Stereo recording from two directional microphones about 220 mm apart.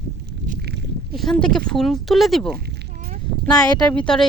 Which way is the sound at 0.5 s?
45° right (ahead or behind).